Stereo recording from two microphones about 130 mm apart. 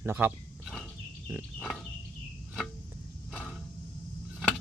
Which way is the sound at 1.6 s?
5° left (ahead or behind).